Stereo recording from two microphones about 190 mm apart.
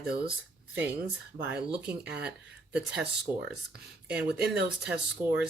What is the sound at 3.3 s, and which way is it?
Speech, 20° right (ahead or behind).